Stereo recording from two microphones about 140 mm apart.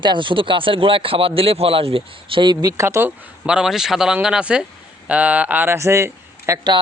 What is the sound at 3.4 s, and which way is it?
Speech, 5° right (ahead or behind).